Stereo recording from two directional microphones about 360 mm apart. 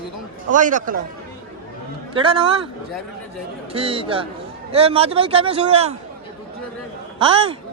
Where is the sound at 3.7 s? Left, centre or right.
Centre.